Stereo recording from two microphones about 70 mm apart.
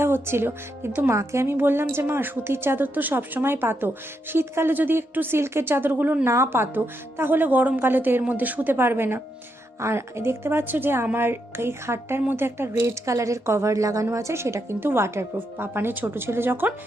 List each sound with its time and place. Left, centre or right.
0.0 s a woman's voice: right
6.2 s a woman's voice: right